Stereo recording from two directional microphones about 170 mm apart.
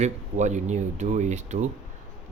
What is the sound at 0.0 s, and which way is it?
Speech, 45° right (ahead or behind).